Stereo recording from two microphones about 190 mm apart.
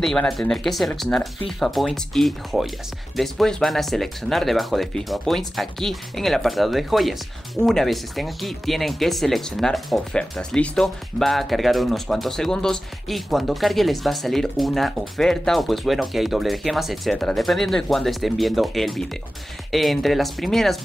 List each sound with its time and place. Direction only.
0.0 s speech: 5° left (ahead or behind)